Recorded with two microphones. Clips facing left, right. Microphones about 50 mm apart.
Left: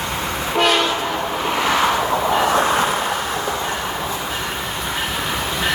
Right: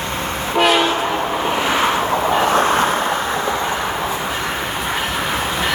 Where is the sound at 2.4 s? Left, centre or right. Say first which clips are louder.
Right 2 dB; right.